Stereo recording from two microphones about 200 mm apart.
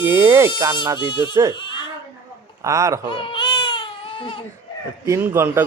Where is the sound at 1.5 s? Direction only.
25° left (ahead or behind).